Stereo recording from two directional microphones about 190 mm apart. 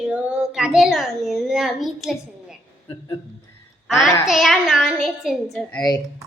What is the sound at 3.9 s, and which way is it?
A child's voice, centre (ahead or behind).